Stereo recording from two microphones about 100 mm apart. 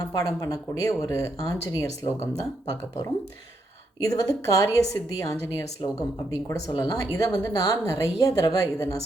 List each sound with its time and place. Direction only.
0.0 s a woman's voice: 35° left (ahead or behind)